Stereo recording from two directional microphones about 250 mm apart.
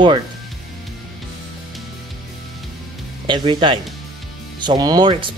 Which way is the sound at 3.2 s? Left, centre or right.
Centre.